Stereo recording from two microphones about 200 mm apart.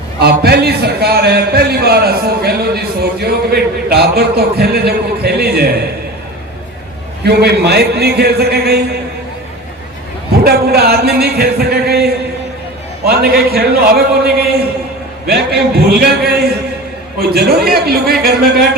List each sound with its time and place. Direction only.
0.2 s a man's voice: 55° right (ahead or behind)
7.3 s a man's voice: 55° right (ahead or behind)
10.4 s a man's voice: 50° right (ahead or behind)